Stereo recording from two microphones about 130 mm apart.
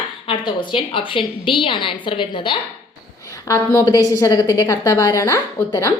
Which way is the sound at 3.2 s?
25° left (ahead or behind).